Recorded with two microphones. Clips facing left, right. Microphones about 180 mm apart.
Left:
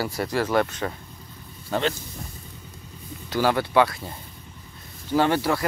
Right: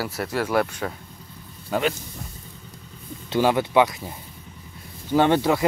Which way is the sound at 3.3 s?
20° right (ahead or behind).